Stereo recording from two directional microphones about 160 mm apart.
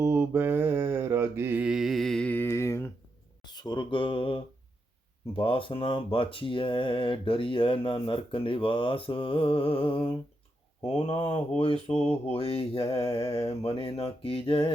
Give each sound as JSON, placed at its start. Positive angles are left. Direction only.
{"t": 0.0, "sound": "mantra", "side_deg": -15}
{"t": 3.4, "sound": "speech", "side_deg": 25}